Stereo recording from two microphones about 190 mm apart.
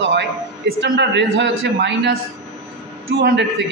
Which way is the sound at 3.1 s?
55° right (ahead or behind).